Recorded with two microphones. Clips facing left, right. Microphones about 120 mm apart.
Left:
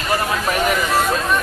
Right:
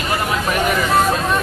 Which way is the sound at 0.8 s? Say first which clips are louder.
Right 2 dB; 25° right (ahead or behind).